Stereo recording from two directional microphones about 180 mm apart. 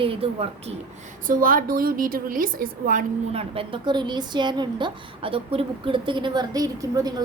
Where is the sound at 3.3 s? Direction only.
30° right (ahead or behind).